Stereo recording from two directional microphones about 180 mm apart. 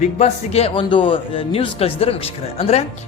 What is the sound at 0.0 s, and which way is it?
A man's voice, 35° left (ahead or behind).